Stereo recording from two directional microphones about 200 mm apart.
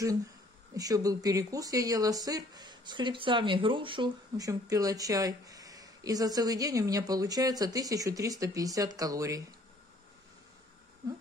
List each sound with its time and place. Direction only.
0.7 s speech: 20° right (ahead or behind)